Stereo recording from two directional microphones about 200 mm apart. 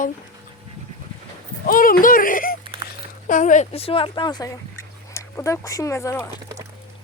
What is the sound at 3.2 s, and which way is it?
Speech, 40° left (ahead or behind).